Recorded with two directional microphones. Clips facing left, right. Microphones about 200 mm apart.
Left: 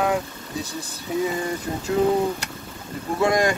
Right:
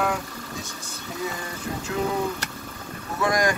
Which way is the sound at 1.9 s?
30° left (ahead or behind).